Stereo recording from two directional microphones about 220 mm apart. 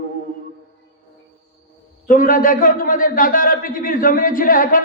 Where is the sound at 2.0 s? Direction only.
40° left (ahead or behind).